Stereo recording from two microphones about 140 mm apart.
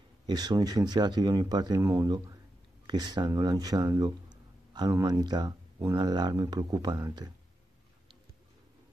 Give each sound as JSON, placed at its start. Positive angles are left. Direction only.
{"t": 0.3, "sound": "speech", "side_deg": -30}